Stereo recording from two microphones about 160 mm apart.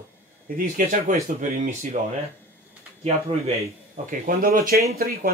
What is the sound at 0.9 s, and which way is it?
Speech, 55° right (ahead or behind).